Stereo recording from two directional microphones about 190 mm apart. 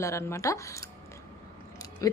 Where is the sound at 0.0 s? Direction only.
15° left (ahead or behind).